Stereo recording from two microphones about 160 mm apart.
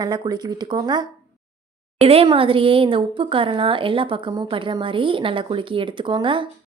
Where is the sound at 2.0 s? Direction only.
40° right (ahead or behind).